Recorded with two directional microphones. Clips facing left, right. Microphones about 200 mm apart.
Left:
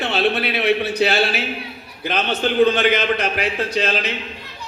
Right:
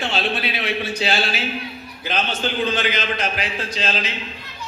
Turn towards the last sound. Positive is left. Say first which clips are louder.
# left 5 dB
turn(degrees=60)  # may be behind; listen again after turning